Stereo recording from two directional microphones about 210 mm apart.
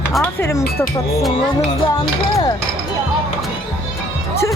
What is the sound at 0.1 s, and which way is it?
Speech, 5° left (ahead or behind).